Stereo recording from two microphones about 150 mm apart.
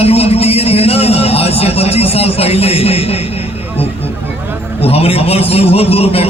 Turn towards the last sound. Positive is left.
turn(degrees=40)  # may be behind; listen again after turning